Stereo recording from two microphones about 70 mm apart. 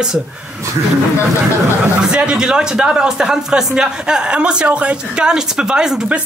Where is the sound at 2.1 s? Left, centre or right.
Centre.